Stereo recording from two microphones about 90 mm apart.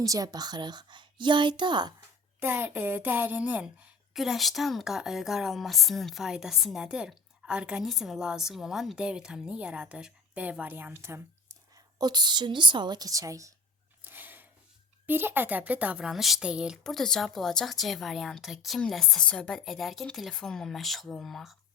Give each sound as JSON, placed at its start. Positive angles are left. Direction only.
{"t": 0.0, "sound": "a woman's voice", "side_deg": -40}
{"t": 2.4, "sound": "speech", "side_deg": -25}
{"t": 4.1, "sound": "a woman's voice", "side_deg": -5}
{"t": 11.9, "sound": "speech", "side_deg": -50}
{"t": 14.0, "sound": "a sound", "side_deg": -20}
{"t": 15.0, "sound": "speech", "side_deg": -25}
{"t": 16.8, "sound": "a woman's voice", "side_deg": 5}